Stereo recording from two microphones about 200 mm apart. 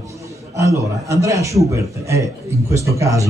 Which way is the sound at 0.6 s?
15° right (ahead or behind).